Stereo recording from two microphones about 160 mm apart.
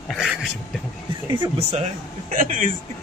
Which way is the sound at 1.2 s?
30° right (ahead or behind).